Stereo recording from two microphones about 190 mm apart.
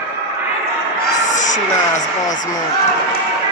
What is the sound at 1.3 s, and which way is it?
Music, 40° left (ahead or behind).